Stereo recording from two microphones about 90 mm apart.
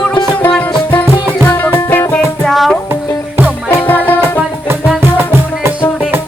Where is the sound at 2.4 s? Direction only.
Centre (ahead or behind).